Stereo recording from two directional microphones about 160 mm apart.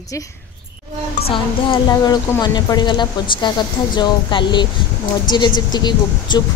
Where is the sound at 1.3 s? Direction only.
30° left (ahead or behind).